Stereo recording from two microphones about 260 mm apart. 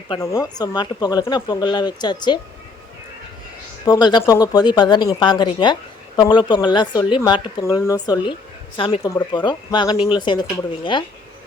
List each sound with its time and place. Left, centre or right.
0.1 s speech: centre
3.8 s speech: centre